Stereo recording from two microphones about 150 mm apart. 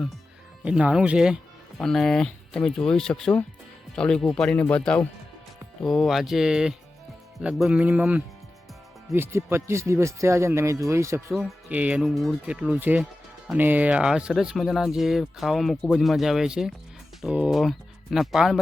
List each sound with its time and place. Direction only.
0.6 s speech: 5° right (ahead or behind)
11.3 s speech: 5° right (ahead or behind)